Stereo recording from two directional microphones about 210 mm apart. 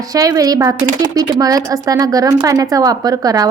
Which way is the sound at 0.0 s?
15° right (ahead or behind).